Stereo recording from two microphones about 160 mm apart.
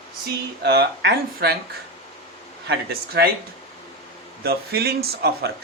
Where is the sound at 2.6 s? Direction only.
85° right.